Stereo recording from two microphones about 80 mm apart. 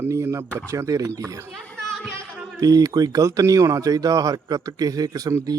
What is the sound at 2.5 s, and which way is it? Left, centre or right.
Speech, right.